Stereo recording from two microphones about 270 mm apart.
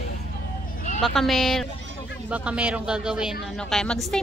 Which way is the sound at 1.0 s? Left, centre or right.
Centre.